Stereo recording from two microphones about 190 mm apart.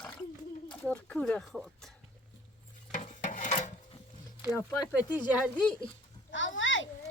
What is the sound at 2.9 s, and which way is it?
Stir, 40° left (ahead or behind).